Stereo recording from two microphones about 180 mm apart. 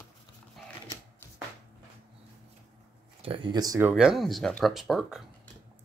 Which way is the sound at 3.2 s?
30° right (ahead or behind).